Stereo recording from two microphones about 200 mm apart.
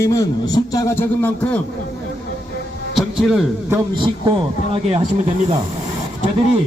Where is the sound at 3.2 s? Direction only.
5° right (ahead or behind).